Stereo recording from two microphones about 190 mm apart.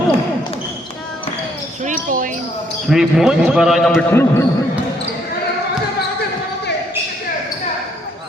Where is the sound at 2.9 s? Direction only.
Centre (ahead or behind).